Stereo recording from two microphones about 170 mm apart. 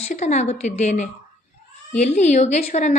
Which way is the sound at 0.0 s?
40° left (ahead or behind).